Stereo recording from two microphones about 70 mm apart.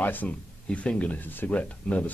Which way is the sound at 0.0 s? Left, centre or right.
Left.